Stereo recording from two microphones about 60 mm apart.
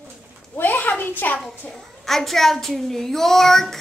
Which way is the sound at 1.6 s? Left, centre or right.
Centre.